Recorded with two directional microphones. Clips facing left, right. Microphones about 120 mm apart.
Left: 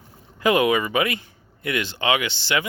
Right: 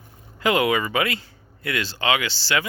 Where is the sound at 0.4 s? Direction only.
20° left (ahead or behind).